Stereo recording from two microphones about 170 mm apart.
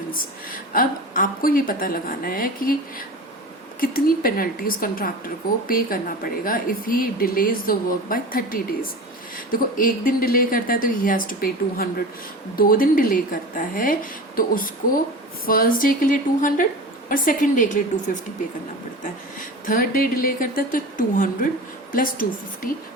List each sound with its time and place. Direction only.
0.1 s a woman's voice: 55° left (ahead or behind)
3.8 s a woman's voice: 60° left (ahead or behind)
19.6 s speech: 55° left (ahead or behind)